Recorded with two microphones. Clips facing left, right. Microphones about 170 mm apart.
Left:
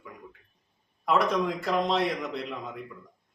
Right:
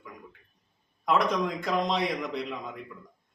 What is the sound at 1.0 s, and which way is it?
A man's voice, centre (ahead or behind).